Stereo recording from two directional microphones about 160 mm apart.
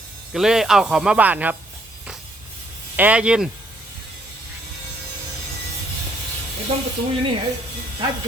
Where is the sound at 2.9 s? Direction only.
10° right (ahead or behind).